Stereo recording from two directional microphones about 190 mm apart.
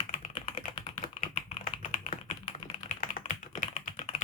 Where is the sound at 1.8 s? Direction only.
40° left (ahead or behind).